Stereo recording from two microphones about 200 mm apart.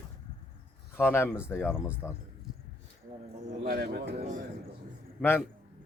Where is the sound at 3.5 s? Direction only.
50° right (ahead or behind).